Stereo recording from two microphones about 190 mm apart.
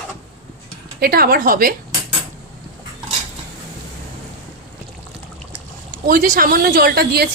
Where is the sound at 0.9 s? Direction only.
55° right (ahead or behind).